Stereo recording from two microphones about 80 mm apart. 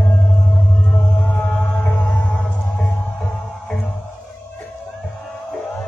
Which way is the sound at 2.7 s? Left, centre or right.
Centre.